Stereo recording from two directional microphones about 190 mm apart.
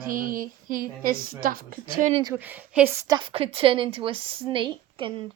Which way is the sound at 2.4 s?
10° right (ahead or behind).